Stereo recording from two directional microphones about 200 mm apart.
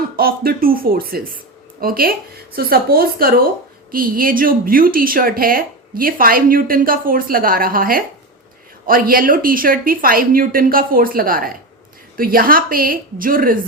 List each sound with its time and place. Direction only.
0.2 s speech: 45° right (ahead or behind)